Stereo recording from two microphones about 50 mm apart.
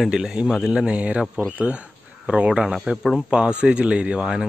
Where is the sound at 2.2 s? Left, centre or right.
Right.